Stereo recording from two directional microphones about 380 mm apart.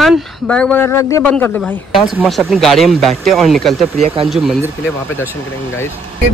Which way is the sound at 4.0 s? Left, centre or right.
Centre.